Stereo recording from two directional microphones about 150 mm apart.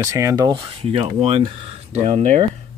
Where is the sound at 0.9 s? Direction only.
40° right (ahead or behind).